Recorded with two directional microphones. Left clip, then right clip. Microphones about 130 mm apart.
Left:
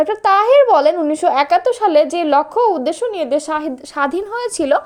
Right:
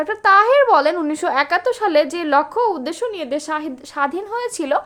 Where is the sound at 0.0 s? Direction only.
25° left (ahead or behind).